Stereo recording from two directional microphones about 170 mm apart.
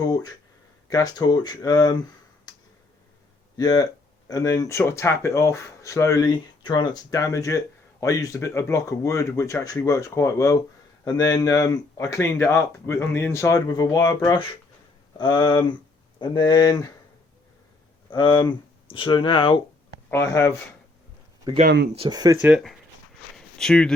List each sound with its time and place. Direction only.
0.0 s speech: 25° left (ahead or behind)
2.5 s tick: 25° left (ahead or behind)
3.6 s speech: 20° left (ahead or behind)
18.1 s speech: 25° left (ahead or behind)
20.1 s speech: 15° left (ahead or behind)
21.5 s speech: 20° right (ahead or behind)
22.4 s speech: 10° right (ahead or behind)
23.6 s speech: 5° left (ahead or behind)